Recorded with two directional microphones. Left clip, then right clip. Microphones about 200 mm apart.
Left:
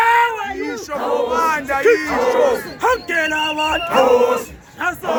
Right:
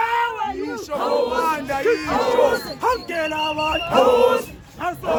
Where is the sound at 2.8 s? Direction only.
45° left (ahead or behind).